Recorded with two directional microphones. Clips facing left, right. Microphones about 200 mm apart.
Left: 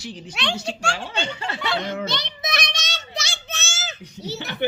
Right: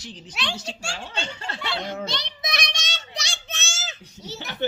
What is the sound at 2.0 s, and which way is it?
Child singing, centre (ahead or behind).